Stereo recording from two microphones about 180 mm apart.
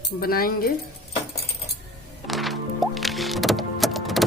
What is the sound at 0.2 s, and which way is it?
Speech, 55° left (ahead or behind).